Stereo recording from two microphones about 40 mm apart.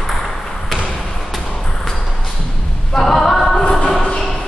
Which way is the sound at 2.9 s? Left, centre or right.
Centre.